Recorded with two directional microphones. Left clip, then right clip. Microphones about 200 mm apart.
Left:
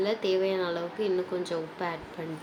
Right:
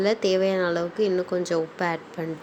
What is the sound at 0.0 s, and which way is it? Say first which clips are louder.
Speech: right 5 dB; 35° right (ahead or behind).